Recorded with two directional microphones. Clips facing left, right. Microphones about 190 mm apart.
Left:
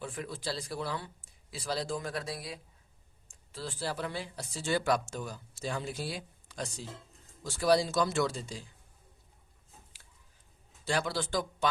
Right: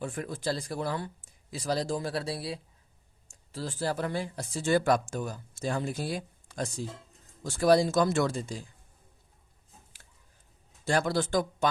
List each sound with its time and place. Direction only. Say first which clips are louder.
0.0 s speech: right 5 dB; 50° right (ahead or behind)
10.8 s speech: right 5 dB; 45° right (ahead or behind)